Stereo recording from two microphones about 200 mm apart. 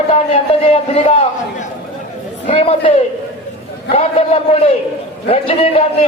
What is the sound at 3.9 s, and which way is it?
Speech, 30° left (ahead or behind).